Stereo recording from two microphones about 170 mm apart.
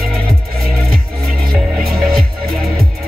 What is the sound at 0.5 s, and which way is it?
Music, 60° right (ahead or behind).